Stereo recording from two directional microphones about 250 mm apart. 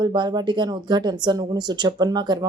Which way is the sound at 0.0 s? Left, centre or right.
Centre.